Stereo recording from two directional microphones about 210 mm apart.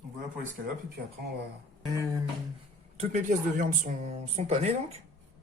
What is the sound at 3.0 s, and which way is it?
Speech, 35° right (ahead or behind).